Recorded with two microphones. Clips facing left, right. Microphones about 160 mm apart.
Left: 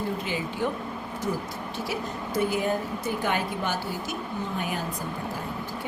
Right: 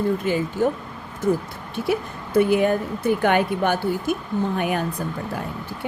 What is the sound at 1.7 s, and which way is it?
A woman's voice, 60° right (ahead or behind).